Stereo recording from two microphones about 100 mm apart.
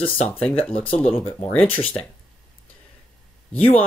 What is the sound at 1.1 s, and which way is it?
Speech, 15° left (ahead or behind).